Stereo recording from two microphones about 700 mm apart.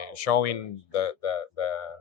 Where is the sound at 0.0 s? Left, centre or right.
Left.